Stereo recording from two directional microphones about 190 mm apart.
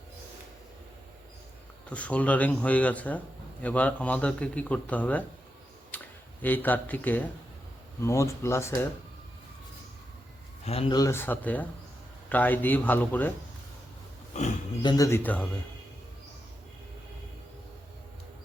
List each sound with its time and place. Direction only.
1.9 s speech: 5° left (ahead or behind)
5.9 s a sound: 10° left (ahead or behind)
6.4 s speech: 10° left (ahead or behind)
10.7 s speech: 30° left (ahead or behind); by 13.3 s 10° left (ahead or behind)
14.3 s speech: 35° left (ahead or behind)
14.8 s speech: 20° left (ahead or behind)